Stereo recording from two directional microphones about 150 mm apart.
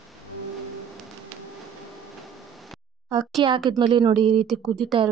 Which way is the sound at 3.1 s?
30° right (ahead or behind).